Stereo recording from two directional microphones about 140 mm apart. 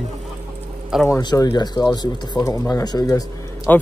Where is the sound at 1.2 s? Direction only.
30° left (ahead or behind).